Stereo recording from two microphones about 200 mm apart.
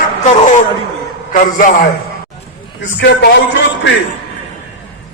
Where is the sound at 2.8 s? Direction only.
60° left (ahead or behind).